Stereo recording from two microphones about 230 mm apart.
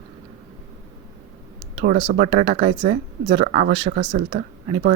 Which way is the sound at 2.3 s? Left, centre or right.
Right.